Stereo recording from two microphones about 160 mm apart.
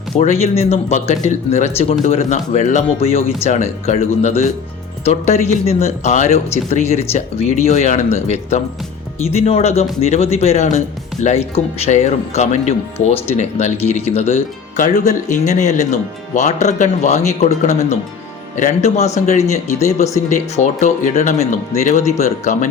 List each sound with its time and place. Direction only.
0.2 s speech: 40° left (ahead or behind)